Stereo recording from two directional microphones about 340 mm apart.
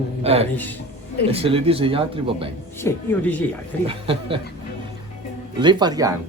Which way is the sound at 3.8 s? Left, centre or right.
Centre.